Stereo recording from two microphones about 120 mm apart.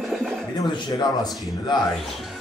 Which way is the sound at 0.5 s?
40° left (ahead or behind).